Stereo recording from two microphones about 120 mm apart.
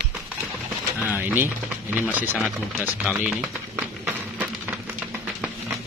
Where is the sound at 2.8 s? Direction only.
10° right (ahead or behind).